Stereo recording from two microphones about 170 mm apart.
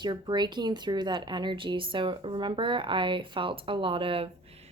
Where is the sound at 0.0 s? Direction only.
25° right (ahead or behind).